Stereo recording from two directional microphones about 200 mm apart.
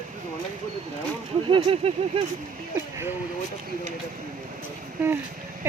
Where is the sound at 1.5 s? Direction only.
30° right (ahead or behind).